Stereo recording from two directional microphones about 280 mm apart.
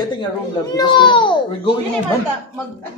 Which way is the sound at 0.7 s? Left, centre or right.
Centre.